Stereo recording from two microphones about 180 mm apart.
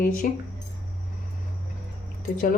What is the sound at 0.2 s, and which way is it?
Speech, 50° left (ahead or behind).